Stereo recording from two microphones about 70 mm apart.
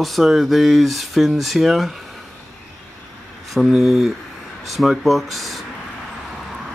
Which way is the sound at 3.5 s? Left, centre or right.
Centre.